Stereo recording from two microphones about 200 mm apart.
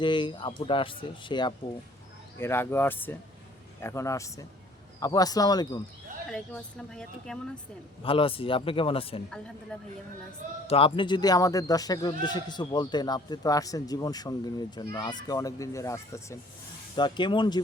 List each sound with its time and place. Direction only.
0.0 s a man's voice: 25° left (ahead or behind)
2.4 s a man's voice: 10° left (ahead or behind)
6.3 s speech: 5° left (ahead or behind)
8.0 s a man's voice: 25° left (ahead or behind)
10.7 s a man's voice: 25° left (ahead or behind)